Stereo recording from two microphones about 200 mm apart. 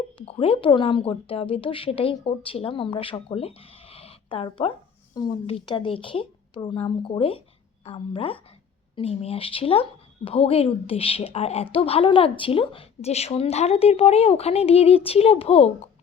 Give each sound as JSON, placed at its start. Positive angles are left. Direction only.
{"t": 0.2, "sound": "a woman's voice", "side_deg": 25}